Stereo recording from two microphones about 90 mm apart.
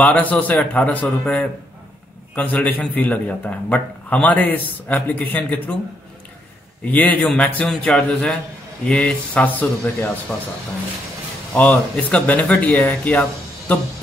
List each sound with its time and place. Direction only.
0.0 s a man's voice: 15° left (ahead or behind)
6.8 s a man's voice: 20° left (ahead or behind)
11.5 s a man's voice: 15° left (ahead or behind)